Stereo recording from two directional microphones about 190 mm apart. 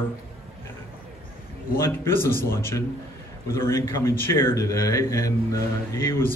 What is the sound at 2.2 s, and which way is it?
Speech, 50° left (ahead or behind).